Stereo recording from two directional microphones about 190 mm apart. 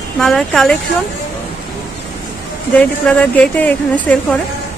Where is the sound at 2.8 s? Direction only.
5° left (ahead or behind).